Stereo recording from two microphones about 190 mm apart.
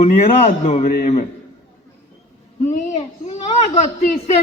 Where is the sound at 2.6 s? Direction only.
40° left (ahead or behind).